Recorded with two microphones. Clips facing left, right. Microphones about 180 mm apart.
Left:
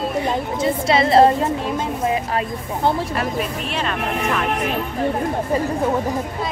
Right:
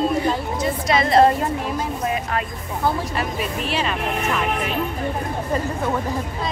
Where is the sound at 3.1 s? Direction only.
Centre (ahead or behind).